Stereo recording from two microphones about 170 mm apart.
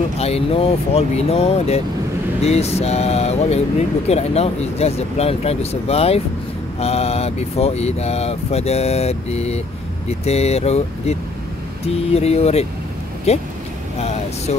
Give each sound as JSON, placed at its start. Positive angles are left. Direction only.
{"t": 0.2, "sound": "speech", "side_deg": 35}